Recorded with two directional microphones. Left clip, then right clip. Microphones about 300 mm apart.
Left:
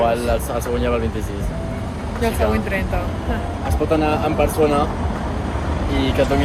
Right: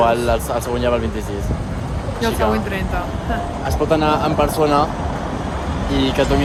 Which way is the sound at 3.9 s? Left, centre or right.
Centre.